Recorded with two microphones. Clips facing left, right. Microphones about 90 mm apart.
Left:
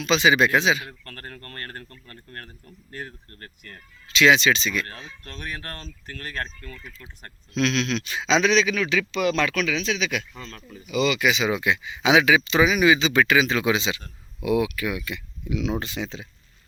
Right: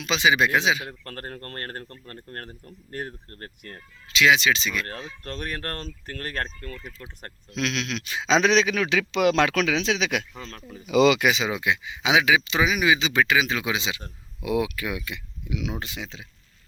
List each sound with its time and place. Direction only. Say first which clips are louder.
0.0 s speech: left 2 dB; 15° right (ahead or behind)
0.9 s speech: right 4 dB; 40° right (ahead or behind)
4.1 s speech: left 2 dB; 5° right (ahead or behind)
5.2 s speech: right 3 dB; 50° right (ahead or behind)
7.5 s speech: left 5 dB; 10° right (ahead or behind)
8.4 s speech: even; 55° right (ahead or behind); by 10.2 s 70° right (ahead or behind)
11.4 s speech: left 2 dB; 15° right (ahead or behind)
14.0 s speech: left 4 dB; 25° right (ahead or behind); by 16.2 s 5° right (ahead or behind)